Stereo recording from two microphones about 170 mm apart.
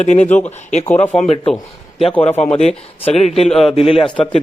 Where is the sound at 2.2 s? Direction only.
40° left (ahead or behind).